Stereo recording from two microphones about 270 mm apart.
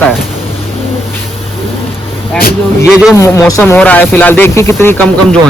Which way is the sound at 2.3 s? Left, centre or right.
Left.